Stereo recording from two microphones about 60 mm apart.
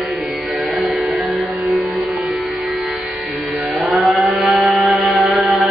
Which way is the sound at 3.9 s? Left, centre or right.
Centre.